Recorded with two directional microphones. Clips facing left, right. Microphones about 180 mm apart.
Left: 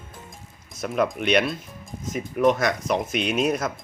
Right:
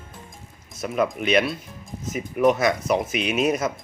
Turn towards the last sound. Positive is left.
turn(degrees=-5)  # may be behind; listen again after turning